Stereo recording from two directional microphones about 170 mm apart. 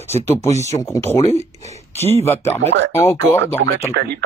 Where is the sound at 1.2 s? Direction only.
40° left (ahead or behind).